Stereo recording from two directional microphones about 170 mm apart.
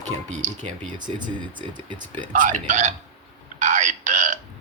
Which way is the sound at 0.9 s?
25° right (ahead or behind).